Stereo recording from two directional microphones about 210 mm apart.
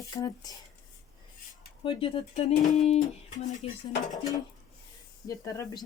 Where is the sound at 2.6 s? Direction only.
30° left (ahead or behind).